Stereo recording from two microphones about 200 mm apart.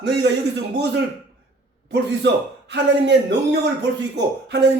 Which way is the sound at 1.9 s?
60° right (ahead or behind).